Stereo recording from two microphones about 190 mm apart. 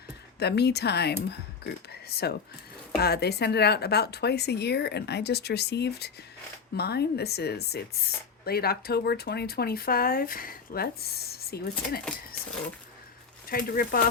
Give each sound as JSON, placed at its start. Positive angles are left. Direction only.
{"t": 0.3, "sound": "speech", "side_deg": 60}
{"t": 13.5, "sound": "speech", "side_deg": 50}